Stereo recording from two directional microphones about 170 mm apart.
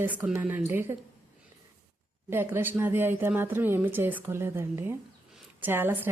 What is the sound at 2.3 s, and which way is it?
Speech, 15° right (ahead or behind).